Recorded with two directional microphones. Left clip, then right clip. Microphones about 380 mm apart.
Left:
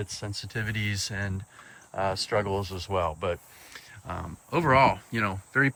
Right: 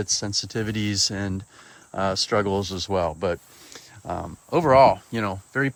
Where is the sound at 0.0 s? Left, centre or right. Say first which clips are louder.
Right 11 dB; centre.